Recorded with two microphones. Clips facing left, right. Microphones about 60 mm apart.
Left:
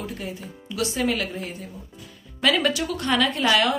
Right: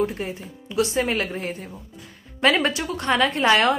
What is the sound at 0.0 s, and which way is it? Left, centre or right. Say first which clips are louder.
A woman's voice: right 7 dB; right.